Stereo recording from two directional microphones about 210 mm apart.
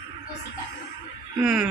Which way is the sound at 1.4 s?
Centre (ahead or behind).